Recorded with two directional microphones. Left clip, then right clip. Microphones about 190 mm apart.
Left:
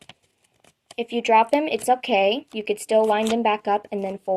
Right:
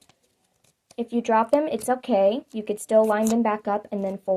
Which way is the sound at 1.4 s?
50° left (ahead or behind).